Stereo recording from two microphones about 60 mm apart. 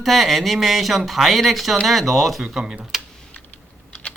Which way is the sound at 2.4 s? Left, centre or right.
Centre.